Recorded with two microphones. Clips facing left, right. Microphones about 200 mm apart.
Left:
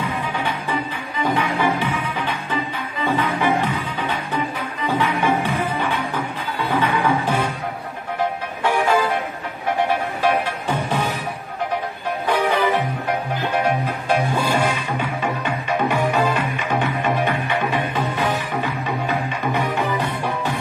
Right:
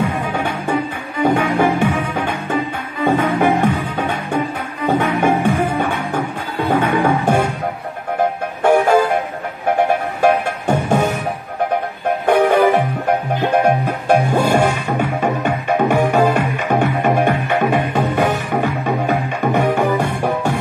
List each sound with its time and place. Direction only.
0.3 s music: 45° right (ahead or behind)
8.6 s music: 45° right (ahead or behind)
10.2 s music: 50° right (ahead or behind)
12.3 s music: 50° right (ahead or behind)